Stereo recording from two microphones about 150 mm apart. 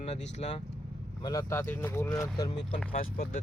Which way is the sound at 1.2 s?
20° left (ahead or behind).